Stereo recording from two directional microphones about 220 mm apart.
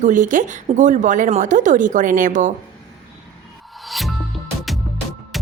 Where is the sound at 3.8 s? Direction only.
Centre (ahead or behind).